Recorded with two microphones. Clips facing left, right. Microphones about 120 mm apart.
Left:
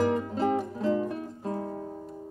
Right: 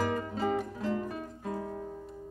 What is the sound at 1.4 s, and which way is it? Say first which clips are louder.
Guitar: left 3 dB; 30° left (ahead or behind).